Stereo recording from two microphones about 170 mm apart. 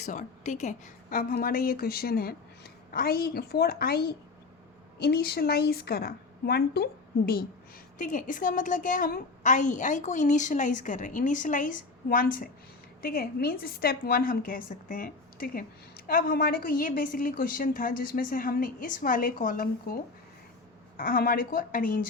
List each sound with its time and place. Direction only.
0.0 s a woman's voice: 45° left (ahead or behind); by 6.8 s 70° left (ahead or behind)
7.9 s a woman's voice: 50° left (ahead or behind)